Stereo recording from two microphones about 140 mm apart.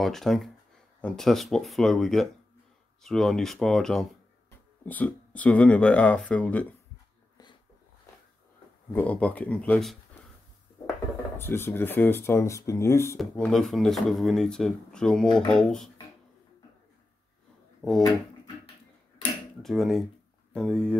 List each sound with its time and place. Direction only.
0.0 s speech: centre (ahead or behind)
8.9 s speech: 10° left (ahead or behind)
11.3 s speech: 15° left (ahead or behind)
13.2 s speech: 5° left (ahead or behind)
17.8 s speech: 20° right (ahead or behind)
19.6 s speech: centre (ahead or behind)